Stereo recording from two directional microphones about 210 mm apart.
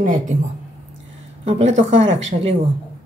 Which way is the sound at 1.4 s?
30° right (ahead or behind).